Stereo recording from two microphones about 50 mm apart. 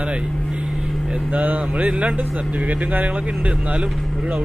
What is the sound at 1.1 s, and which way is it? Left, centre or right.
Speech, right.